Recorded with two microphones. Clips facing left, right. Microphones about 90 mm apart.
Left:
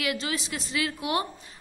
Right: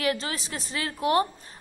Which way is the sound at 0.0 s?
35° right (ahead or behind).